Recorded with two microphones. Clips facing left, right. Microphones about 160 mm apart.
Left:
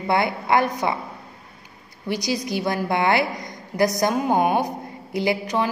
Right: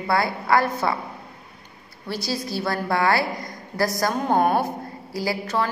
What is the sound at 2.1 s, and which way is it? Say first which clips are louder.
A woman's voice: left 3 dB; 15° left (ahead or behind).